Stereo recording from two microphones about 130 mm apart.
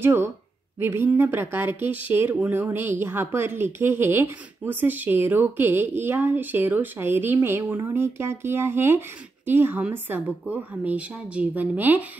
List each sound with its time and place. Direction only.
0.0 s speech: 20° right (ahead or behind)